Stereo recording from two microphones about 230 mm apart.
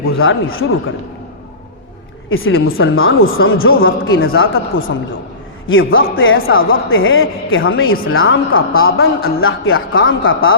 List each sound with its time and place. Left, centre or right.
0.0 s a woman's voice: left
2.3 s a woman's voice: left